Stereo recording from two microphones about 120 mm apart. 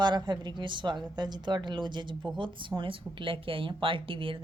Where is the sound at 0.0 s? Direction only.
40° right (ahead or behind).